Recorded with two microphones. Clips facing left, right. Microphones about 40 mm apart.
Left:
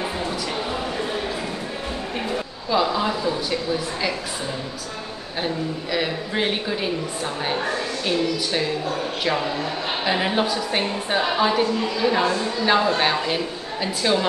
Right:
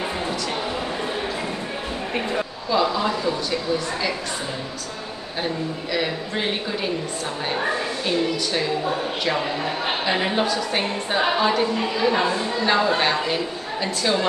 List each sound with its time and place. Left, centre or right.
2.7 s a sound: centre
5.9 s a woman's voice: centre
9.4 s a man's voice: centre
10.0 s a woman's voice: centre
12.6 s a woman's voice: centre